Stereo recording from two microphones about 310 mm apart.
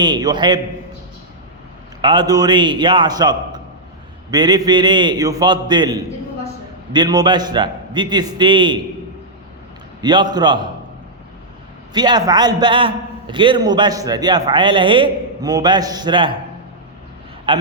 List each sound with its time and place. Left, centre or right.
0.0 s a man's voice: centre
2.0 s a man's voice: centre
10.0 s a man's voice: centre
11.9 s a man's voice: centre
17.5 s a man's voice: centre